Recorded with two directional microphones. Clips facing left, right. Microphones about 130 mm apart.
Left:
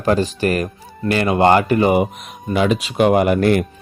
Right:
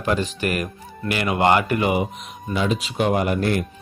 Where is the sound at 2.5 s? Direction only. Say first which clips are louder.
Left 6 dB; 70° left (ahead or behind).